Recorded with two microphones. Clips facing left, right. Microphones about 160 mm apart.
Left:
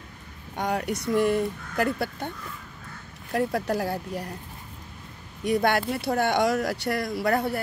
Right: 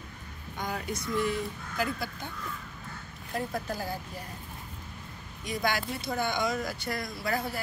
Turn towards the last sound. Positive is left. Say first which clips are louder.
# left 7 dB
turn(degrees=60)  # may be behind; listen again after turning